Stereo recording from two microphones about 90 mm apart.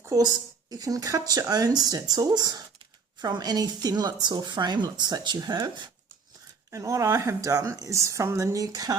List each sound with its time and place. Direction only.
0.0 s a woman's voice: 40° right (ahead or behind)
6.7 s speech: 35° right (ahead or behind)